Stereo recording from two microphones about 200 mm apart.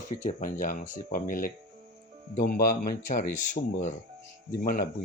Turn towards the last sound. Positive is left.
turn(degrees=45)  # may be behind; listen again after turning